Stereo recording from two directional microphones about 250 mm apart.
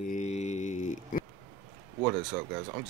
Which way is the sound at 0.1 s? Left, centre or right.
Left.